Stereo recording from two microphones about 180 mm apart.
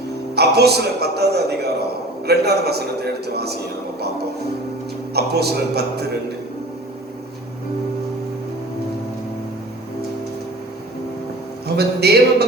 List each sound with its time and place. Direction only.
0.3 s a man's voice: 65° right (ahead or behind)
5.1 s a man's voice: 65° right (ahead or behind)
11.8 s a man's voice: 65° right (ahead or behind)